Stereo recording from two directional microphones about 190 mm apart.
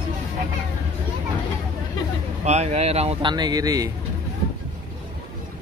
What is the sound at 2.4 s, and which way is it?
Speech, 35° right (ahead or behind).